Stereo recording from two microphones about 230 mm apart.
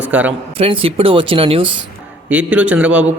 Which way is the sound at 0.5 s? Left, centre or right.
Right.